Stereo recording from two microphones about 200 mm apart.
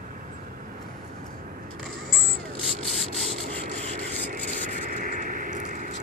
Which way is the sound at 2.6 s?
Centre (ahead or behind).